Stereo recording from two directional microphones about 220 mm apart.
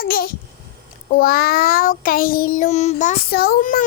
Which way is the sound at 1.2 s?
40° left (ahead or behind).